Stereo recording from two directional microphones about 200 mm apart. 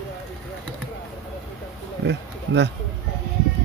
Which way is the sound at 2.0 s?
60° right (ahead or behind).